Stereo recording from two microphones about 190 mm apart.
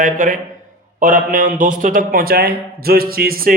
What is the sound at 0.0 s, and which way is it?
A man's voice, 45° right (ahead or behind).